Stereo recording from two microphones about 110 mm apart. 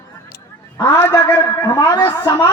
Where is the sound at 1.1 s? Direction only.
30° left (ahead or behind).